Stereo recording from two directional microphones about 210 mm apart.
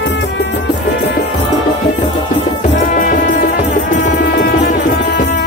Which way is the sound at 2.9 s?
40° left (ahead or behind).